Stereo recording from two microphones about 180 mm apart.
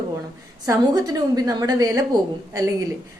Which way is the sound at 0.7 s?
20° right (ahead or behind).